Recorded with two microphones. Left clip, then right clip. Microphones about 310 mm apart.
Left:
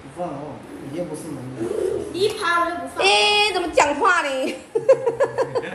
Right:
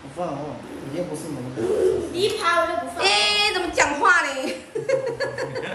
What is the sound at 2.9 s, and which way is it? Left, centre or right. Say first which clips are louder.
Female singing: left 4 dB; centre.